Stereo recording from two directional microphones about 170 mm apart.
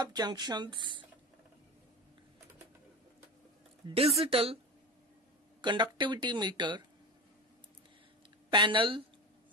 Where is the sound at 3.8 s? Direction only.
35° right (ahead or behind).